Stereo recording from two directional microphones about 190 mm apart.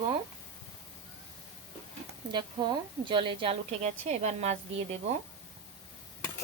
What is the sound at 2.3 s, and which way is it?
A woman's voice, 25° right (ahead or behind).